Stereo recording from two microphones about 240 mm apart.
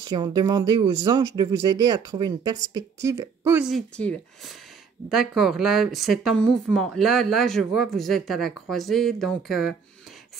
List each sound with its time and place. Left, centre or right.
0.0 s speech: centre